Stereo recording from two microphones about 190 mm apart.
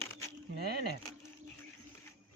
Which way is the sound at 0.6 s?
55° right (ahead or behind).